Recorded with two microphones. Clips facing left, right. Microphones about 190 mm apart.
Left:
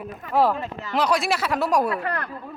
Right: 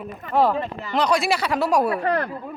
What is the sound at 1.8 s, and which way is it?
Speech, 30° right (ahead or behind).